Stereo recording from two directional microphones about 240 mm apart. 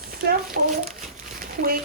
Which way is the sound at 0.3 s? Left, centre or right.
Right.